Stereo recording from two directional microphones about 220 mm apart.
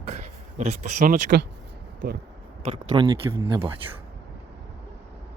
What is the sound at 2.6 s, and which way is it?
Speech, 20° right (ahead or behind).